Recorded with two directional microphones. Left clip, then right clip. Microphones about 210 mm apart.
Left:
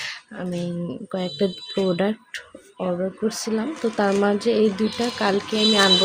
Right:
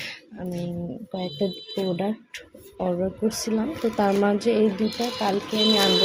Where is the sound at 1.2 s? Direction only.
20° left (ahead or behind).